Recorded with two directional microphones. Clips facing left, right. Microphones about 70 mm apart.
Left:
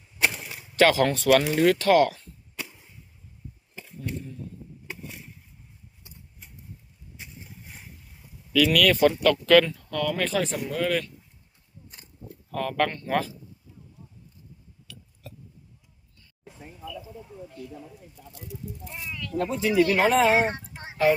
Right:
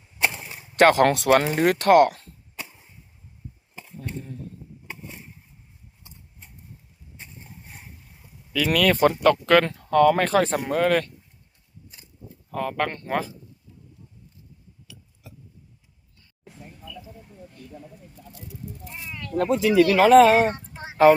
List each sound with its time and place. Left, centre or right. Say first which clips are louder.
0.2 s a sound: even; centre
0.8 s speech: right 3 dB; right
1.0 s speech: right 5 dB; right
1.4 s speech: even; right
1.8 s speech: right 8 dB; right
2.6 s arrow: even; centre
3.8 s a sound: right 1 dB; centre
8.5 s speech: even; right
9.7 s speech: right 10 dB; right
12.5 s speech: even; right
19.1 s a sound: right 3 dB; right
19.4 s speech: right 4 dB; right
20.9 s speech: right 7 dB; right